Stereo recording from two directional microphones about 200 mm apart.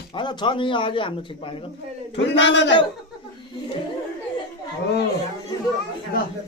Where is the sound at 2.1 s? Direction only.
65° left (ahead or behind).